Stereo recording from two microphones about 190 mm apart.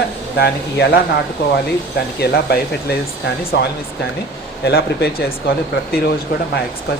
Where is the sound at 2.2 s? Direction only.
55° left (ahead or behind).